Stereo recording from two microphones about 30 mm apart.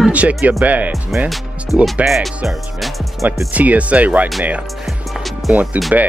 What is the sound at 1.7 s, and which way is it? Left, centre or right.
Speech, centre.